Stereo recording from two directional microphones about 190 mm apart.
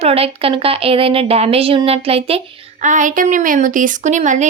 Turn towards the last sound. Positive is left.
turn(degrees=-40)  # may be behind; listen again after turning